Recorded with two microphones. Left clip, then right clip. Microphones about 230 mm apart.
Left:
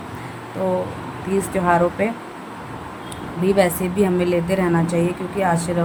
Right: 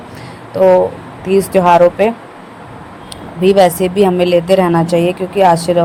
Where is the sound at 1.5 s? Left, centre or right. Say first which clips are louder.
Right 10 dB; right.